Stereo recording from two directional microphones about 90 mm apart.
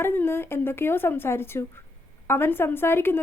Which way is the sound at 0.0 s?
25° left (ahead or behind).